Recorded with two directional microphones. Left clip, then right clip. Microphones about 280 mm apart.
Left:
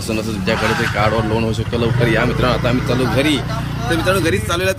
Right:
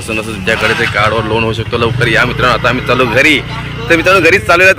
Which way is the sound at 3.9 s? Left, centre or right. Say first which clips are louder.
Right 10 dB; right.